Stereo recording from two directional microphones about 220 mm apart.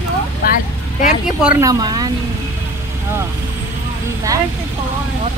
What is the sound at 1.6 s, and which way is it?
Speech, 15° right (ahead or behind).